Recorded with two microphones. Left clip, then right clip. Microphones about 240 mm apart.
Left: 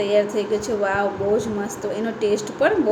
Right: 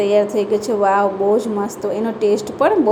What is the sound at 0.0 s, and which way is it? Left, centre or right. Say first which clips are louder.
A woman's voice: right 4 dB; centre.